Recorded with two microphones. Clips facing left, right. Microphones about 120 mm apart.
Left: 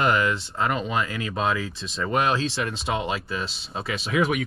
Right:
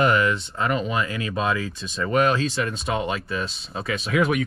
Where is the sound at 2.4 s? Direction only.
30° left (ahead or behind).